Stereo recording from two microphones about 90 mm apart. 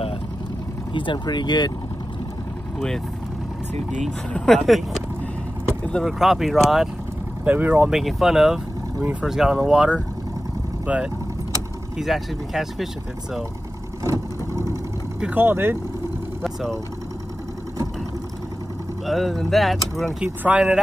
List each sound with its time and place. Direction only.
0.9 s speech: 60° left (ahead or behind)
4.3 s speech: centre (ahead or behind)
6.0 s speech: centre (ahead or behind)
7.4 s speech: 20° right (ahead or behind)
7.9 s speech: 5° right (ahead or behind)
12.0 s speech: centre (ahead or behind)
14.0 s vehicle: 35° right (ahead or behind)
15.3 s speech: 25° right (ahead or behind)
19.0 s speech: centre (ahead or behind)
20.4 s speech: 10° right (ahead or behind)